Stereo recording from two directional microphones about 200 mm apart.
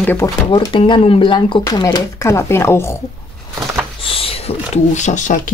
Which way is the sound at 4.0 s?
30° left (ahead or behind).